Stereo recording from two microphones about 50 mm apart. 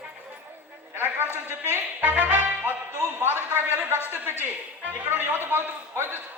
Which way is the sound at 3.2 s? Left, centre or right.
Right.